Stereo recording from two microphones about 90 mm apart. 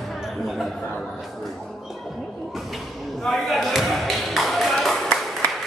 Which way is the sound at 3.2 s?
Centre (ahead or behind).